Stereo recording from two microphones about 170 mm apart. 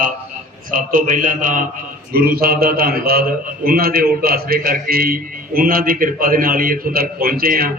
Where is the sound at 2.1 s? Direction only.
60° right (ahead or behind).